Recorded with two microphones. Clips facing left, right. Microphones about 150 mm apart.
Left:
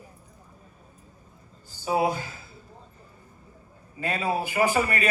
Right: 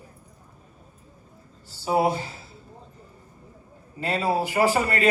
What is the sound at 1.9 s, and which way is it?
Speech, 30° right (ahead or behind).